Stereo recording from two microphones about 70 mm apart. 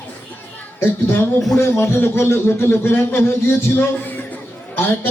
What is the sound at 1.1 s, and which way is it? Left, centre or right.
A man's voice, left.